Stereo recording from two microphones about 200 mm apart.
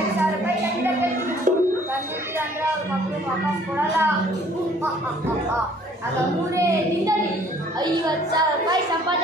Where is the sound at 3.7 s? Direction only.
10° right (ahead or behind).